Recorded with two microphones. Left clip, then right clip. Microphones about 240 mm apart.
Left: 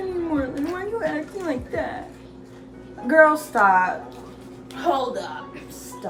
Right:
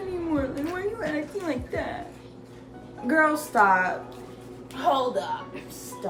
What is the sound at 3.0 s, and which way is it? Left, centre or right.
Speech, centre.